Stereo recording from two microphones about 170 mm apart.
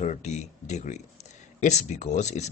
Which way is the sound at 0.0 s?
45° left (ahead or behind).